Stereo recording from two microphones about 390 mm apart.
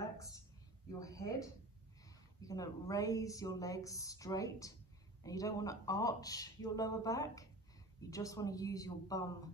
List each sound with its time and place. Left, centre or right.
0.9 s a woman's voice: centre